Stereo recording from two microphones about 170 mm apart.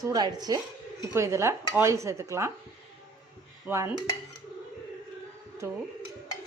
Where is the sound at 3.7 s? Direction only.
15° right (ahead or behind).